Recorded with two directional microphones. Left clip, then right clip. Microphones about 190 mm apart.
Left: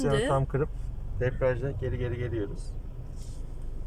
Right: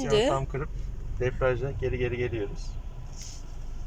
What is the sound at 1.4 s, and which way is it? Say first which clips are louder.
Speech: right 1 dB; 15° right (ahead or behind).